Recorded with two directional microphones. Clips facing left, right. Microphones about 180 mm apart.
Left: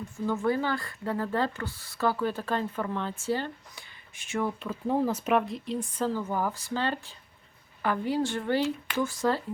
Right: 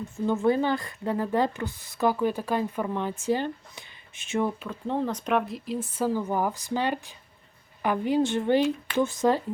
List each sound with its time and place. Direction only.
0.3 s speech: 20° right (ahead or behind)
4.6 s speech: 5° left (ahead or behind); by 9.4 s 20° right (ahead or behind)